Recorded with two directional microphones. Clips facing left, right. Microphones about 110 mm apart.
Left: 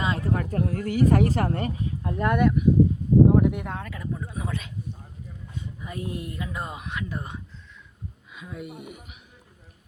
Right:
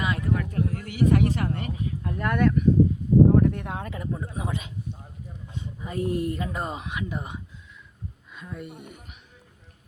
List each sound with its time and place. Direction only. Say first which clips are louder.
0.0 s speech: left 1 dB; 30° left (ahead or behind); by 2.6 s 15° left (ahead or behind)
3.3 s a sound: even; 10° left (ahead or behind)
3.8 s speech: right 1 dB; 25° right (ahead or behind)
5.5 s speech: right 4 dB; 30° right (ahead or behind)
6.8 s speech: right 1 dB; 15° right (ahead or behind)
8.4 s speech: left 1 dB; 5° left (ahead or behind)